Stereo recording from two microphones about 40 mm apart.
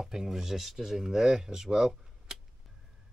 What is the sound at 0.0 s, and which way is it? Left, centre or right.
Speech, centre.